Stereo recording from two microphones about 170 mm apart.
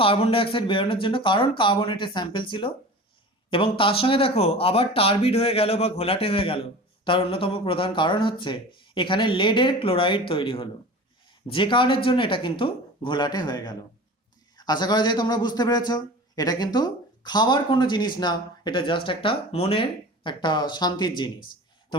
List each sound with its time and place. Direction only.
0.0 s speech: 35° left (ahead or behind)